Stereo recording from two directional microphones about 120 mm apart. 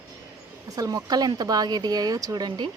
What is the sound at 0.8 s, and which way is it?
Speech, 30° right (ahead or behind).